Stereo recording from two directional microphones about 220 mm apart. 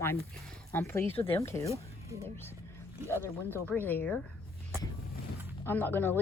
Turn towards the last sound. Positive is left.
turn(degrees=10)  # may be behind; listen again after turning